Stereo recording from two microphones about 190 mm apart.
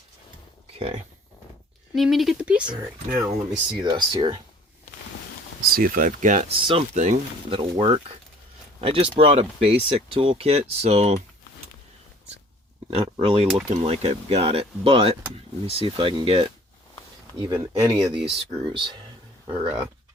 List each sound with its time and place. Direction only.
0.8 s speech: 30° right (ahead or behind)
2.0 s speech: centre (ahead or behind)
2.6 s speech: 20° right (ahead or behind)
5.7 s speech: 45° right (ahead or behind)
6.6 s speech: 30° right (ahead or behind)
12.9 s speech: 30° right (ahead or behind)
18.1 s speech: 5° right (ahead or behind)
18.6 s speech: 25° right (ahead or behind)
19.5 s speech: 10° right (ahead or behind)